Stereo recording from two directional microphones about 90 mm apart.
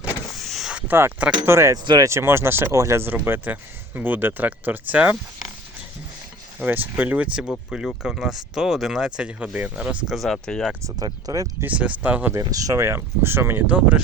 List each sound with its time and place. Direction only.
0.3 s a sound: centre (ahead or behind)
0.7 s a sound: 10° right (ahead or behind)
1.5 s speech: 30° right (ahead or behind)
6.6 s speech: 20° right (ahead or behind)
10.2 s speech: 5° left (ahead or behind)
10.8 s speech: 40° right (ahead or behind)
11.6 s speech: 15° right (ahead or behind)
12.3 s speech: 40° right (ahead or behind); by 13.7 s 25° right (ahead or behind)
13.7 s speech: 15° right (ahead or behind)